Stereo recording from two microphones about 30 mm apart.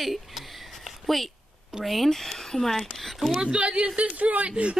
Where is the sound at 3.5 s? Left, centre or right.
Right.